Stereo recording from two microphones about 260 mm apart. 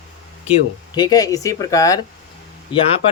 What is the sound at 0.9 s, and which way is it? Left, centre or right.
Speech, centre.